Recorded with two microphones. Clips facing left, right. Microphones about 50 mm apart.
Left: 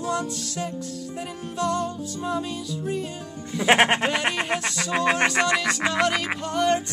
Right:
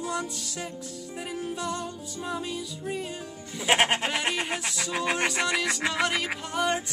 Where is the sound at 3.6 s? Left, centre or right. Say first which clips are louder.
Left 5 dB; left.